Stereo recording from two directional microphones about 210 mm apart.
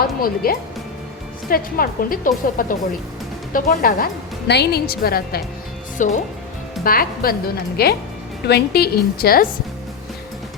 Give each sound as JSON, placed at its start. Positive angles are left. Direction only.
{"t": 0.0, "sound": "a woman's voice", "side_deg": 45}